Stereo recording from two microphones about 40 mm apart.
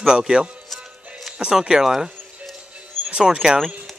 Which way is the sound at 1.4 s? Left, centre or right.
Centre.